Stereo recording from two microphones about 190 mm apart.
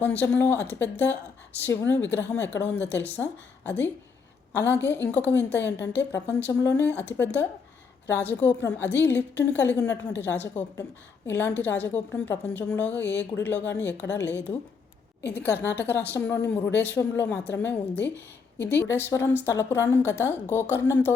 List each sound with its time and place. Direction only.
0.0 s a woman's voice: 10° left (ahead or behind)
14.1 s a woman's voice: 70° left (ahead or behind)
15.3 s a woman's voice: 10° left (ahead or behind)